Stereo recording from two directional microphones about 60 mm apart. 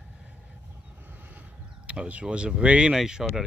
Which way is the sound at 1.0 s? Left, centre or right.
Right.